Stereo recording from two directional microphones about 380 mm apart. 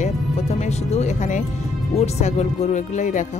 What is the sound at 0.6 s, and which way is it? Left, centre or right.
Speech, centre.